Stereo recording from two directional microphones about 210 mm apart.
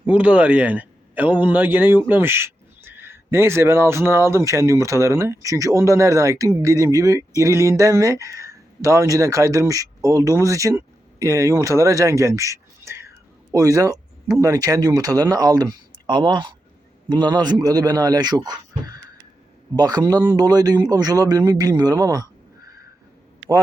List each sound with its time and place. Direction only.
0.0 s a man's voice: 5° right (ahead or behind)